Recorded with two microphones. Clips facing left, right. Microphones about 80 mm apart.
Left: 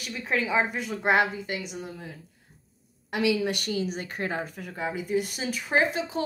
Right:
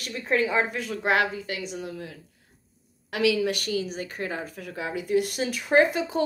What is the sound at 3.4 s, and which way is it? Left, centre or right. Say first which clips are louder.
A woman's voice: right 1 dB; left.